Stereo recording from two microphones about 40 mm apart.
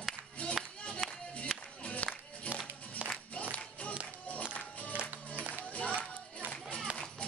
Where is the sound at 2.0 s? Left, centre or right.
Left.